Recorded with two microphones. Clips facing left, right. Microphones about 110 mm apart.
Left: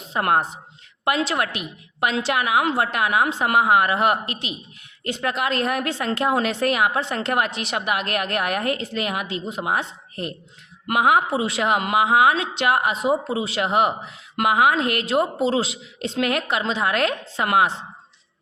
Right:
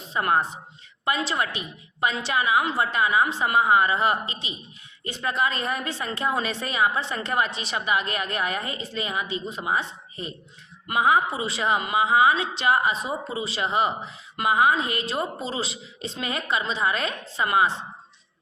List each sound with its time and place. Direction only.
0.1 s a woman's voice: 70° left (ahead or behind); by 17.7 s 85° left